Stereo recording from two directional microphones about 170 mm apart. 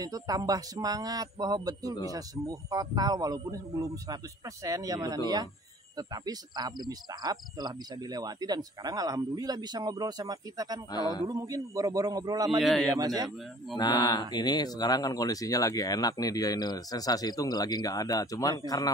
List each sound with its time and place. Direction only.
0.0 s speech: 20° right (ahead or behind)
10.9 s speech: 25° left (ahead or behind)
11.2 s speech: 20° right (ahead or behind)
12.4 s a man's voice: centre (ahead or behind)
13.0 s speech: 20° right (ahead or behind)
13.7 s speech: 25° left (ahead or behind)